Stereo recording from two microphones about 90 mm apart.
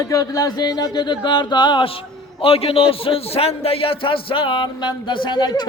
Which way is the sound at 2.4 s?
90° left.